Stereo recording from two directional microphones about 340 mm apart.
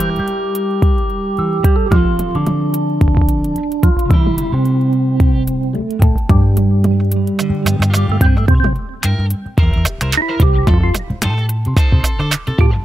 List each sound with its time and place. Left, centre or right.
0.0 s music: centre
10.1 s music: centre
12.3 s music: centre